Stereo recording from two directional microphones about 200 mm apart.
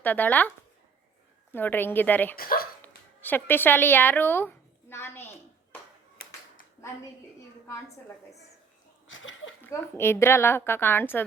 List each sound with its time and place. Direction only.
0.0 s a woman's voice: 10° left (ahead or behind)
1.5 s a woman's voice: 10° left (ahead or behind)
2.3 s speech: 45° left (ahead or behind)
2.8 s a sound: 10° left (ahead or behind)
6.2 s clapping: 50° left (ahead or behind)
9.0 s a sound: 70° left (ahead or behind)
9.6 s a woman's voice: 10° left (ahead or behind)